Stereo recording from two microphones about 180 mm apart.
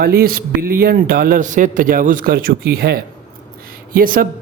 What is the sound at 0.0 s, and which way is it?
Speech, 55° right (ahead or behind).